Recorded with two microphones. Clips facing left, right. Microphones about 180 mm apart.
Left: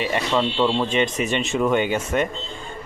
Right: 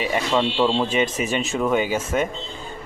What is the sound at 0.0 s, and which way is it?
Speech, 5° right (ahead or behind).